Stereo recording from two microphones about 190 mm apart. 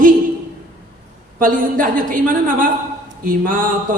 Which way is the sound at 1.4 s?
45° right (ahead or behind).